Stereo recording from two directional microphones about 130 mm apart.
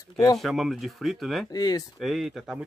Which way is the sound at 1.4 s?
30° left (ahead or behind).